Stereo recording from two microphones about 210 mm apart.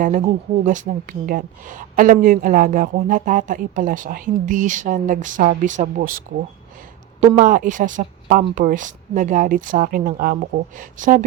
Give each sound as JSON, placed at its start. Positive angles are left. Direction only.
{"t": 0.0, "sound": "speech", "side_deg": -35}
{"t": 7.3, "sound": "speech", "side_deg": -40}